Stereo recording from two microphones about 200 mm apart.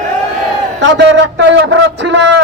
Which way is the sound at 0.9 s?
65° right (ahead or behind).